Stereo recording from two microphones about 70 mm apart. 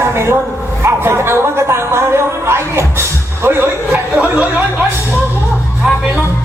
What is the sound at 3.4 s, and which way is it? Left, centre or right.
Music, right.